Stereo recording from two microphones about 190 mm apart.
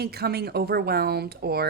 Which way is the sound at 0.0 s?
55° right (ahead or behind).